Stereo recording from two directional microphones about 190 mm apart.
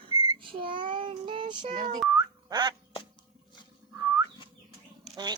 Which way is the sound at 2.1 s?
20° right (ahead or behind).